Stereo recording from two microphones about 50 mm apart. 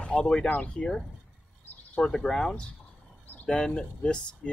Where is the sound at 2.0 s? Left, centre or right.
Centre.